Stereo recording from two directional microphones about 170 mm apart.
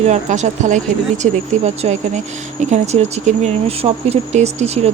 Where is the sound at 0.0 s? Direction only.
45° right (ahead or behind).